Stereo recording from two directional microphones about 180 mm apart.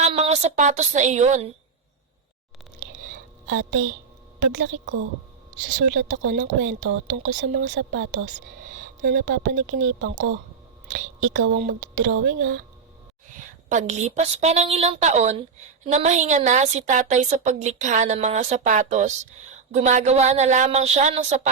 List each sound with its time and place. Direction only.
0.0 s a woman's voice: 35° right (ahead or behind)
3.4 s speech: 90° right
6.2 s speech: 45° right (ahead or behind)
6.6 s speech: 90° right
7.3 s speech: 65° right (ahead or behind); by 8.3 s 80° right
8.6 s a sound: 50° right (ahead or behind)
9.2 s speech: 85° right
11.2 s speech: 90° right
13.7 s a woman's voice: 40° right (ahead or behind)